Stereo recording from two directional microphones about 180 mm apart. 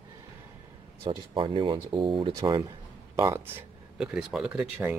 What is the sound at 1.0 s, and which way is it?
Speech, 25° right (ahead or behind).